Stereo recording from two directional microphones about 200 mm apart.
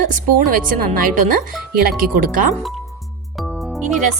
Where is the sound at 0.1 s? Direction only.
45° right (ahead or behind).